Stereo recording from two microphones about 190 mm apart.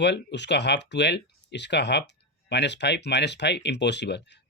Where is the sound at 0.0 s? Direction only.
65° left (ahead or behind).